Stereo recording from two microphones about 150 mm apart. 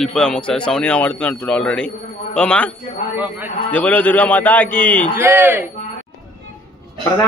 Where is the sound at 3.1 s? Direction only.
10° right (ahead or behind).